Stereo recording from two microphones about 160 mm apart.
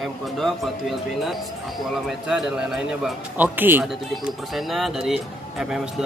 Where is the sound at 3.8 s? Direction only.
Centre (ahead or behind).